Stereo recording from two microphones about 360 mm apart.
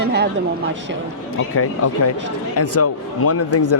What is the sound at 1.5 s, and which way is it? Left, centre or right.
Speech, left.